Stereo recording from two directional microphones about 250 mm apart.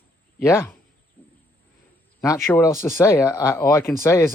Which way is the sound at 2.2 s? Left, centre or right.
Centre.